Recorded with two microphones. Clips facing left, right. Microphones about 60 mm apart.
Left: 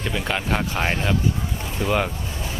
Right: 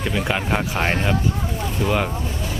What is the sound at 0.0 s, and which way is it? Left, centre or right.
Speech, centre.